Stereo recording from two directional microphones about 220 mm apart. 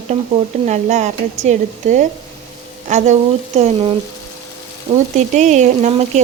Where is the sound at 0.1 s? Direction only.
30° right (ahead or behind).